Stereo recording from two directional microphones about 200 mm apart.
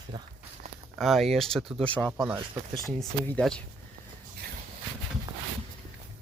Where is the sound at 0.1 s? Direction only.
20° right (ahead or behind).